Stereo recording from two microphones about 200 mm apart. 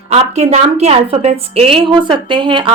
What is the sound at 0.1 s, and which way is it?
A woman's voice, 35° right (ahead or behind).